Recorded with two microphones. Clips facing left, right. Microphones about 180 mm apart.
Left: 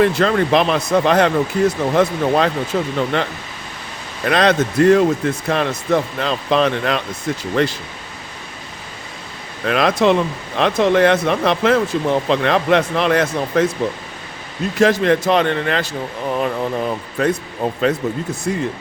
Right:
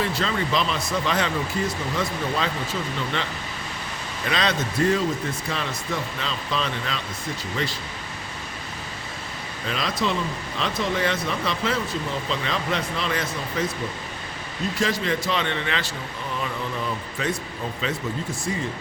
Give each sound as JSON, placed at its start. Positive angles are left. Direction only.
{"t": 0.0, "sound": "speech", "side_deg": 60}
{"t": 4.3, "sound": "speech", "side_deg": 60}
{"t": 9.6, "sound": "speech", "side_deg": 65}
{"t": 14.8, "sound": "speech", "side_deg": 60}
{"t": 15.3, "sound": "speech", "side_deg": 50}